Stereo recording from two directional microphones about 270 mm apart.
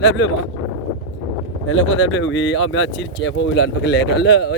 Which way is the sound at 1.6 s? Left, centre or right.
Left.